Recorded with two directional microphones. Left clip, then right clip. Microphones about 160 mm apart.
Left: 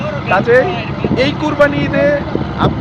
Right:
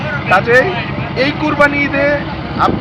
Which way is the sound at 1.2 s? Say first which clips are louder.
Right 1 dB; 30° left (ahead or behind).